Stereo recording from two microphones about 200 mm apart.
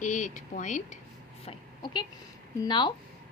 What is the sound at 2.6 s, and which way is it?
Speech, 20° left (ahead or behind).